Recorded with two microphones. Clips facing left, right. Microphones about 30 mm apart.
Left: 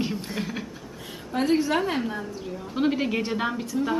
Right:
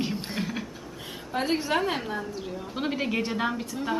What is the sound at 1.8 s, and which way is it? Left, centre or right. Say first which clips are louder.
A woman's voice: left 1 dB; centre.